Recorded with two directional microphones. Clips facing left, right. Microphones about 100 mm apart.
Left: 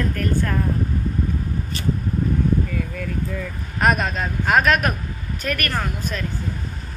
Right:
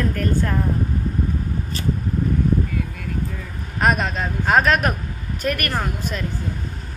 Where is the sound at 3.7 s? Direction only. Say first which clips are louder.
Even; 20° right (ahead or behind).